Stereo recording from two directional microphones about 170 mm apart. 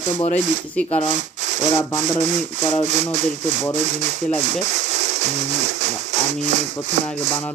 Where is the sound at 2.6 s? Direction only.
15° left (ahead or behind).